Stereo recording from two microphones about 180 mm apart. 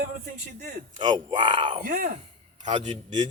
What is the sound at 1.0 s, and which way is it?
Speech, 25° right (ahead or behind).